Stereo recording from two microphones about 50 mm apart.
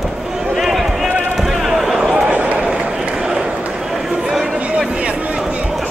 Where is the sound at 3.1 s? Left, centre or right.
Centre.